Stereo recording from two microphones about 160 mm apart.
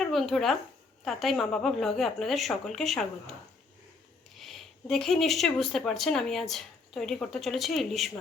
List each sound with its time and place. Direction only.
0.0 s speech: centre (ahead or behind)
4.4 s speech: centre (ahead or behind)